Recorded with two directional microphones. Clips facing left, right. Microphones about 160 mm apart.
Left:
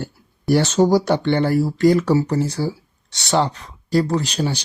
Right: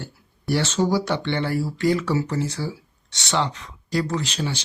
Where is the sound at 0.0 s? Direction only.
45° left (ahead or behind).